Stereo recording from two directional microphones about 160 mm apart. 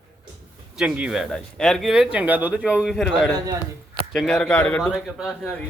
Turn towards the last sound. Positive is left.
turn(degrees=0)  # may be behind; listen again after turning